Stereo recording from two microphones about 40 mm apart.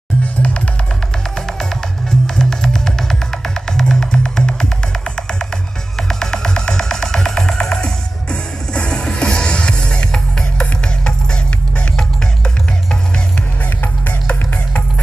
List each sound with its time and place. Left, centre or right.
0.2 s music: left
1.3 s music: centre
5.9 s music: centre
14.0 s music: left